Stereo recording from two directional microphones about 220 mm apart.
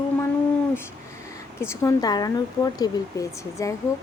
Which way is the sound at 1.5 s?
15° left (ahead or behind).